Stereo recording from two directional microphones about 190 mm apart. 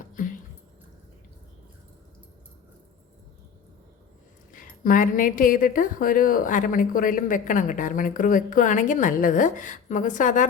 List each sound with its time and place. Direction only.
4.5 s a woman's voice: 45° left (ahead or behind)